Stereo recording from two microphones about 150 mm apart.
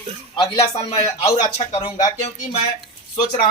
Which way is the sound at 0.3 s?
45° left (ahead or behind).